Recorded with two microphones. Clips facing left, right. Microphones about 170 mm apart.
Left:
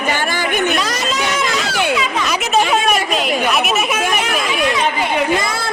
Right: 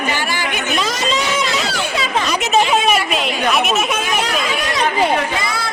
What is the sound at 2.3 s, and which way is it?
Speech, centre (ahead or behind).